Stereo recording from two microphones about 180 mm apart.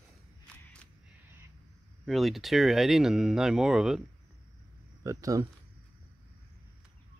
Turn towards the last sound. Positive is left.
turn(degrees=-20)  # may be behind; listen again after turning